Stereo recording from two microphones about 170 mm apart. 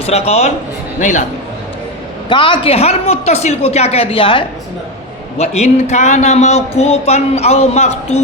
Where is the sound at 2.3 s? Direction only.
30° left (ahead or behind).